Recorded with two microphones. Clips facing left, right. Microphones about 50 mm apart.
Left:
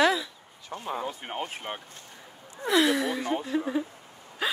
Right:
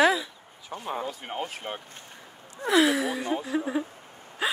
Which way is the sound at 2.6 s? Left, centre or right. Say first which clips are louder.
Right 1 dB; centre.